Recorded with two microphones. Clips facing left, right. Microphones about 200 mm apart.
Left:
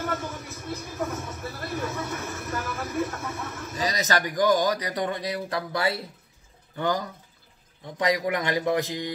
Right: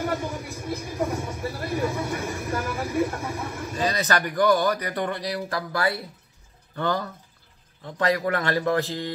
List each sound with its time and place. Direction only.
0.0 s vehicle: 15° right (ahead or behind)
4.0 s a man's voice: 15° left (ahead or behind)